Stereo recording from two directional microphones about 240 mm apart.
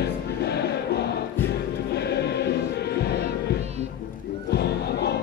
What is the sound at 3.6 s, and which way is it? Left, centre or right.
Music, right.